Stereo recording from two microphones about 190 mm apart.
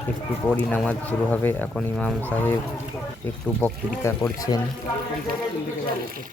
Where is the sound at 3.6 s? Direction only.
15° left (ahead or behind).